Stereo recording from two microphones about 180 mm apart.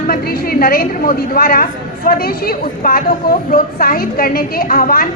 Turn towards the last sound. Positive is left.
turn(degrees=55)  # may be behind; listen again after turning